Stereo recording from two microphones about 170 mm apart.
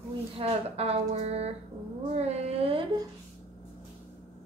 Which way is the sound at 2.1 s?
40° right (ahead or behind).